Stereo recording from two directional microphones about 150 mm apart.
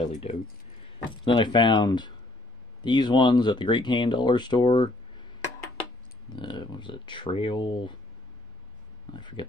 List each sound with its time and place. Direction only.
0.0 s speech: 40° left (ahead or behind)
0.9 s speech: 30° left (ahead or behind)
6.3 s speech: 30° left (ahead or behind)
9.1 s speech: 30° left (ahead or behind)